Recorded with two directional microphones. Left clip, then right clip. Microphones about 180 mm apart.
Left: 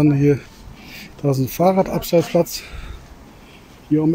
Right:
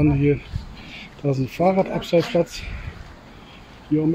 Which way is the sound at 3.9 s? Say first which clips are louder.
Left 3 dB; 35° left (ahead or behind).